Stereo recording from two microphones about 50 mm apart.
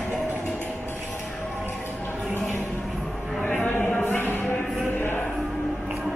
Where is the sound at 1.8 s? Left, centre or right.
Left.